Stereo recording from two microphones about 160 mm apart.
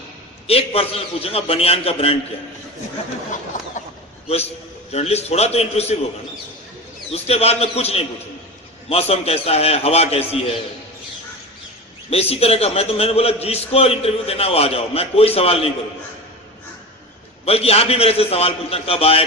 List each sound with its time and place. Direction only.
0.4 s a man's voice: 40° left (ahead or behind)
3.8 s a sound: 50° left (ahead or behind)
4.9 s a man's voice: 40° left (ahead or behind)
7.1 s a man's voice: 40° left (ahead or behind)
12.1 s a man's voice: 40° left (ahead or behind)
17.4 s a man's voice: 40° left (ahead or behind)